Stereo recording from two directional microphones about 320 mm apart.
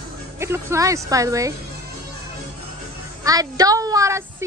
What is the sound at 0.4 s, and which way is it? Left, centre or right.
A woman's voice, centre.